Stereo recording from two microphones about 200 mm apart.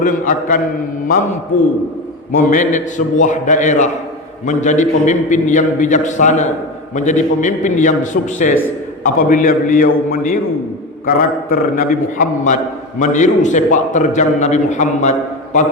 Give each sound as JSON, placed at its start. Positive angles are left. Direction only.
{"t": 0.0, "sound": "a man's voice", "side_deg": 40}
{"t": 2.3, "sound": "a man's voice", "side_deg": 40}